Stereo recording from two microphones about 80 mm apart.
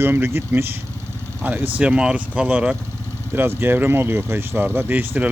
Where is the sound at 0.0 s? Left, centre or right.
Right.